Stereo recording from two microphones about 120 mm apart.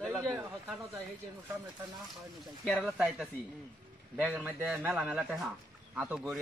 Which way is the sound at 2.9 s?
5° right (ahead or behind).